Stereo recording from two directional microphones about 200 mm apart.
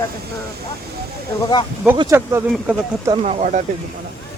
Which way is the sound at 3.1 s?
30° right (ahead or behind).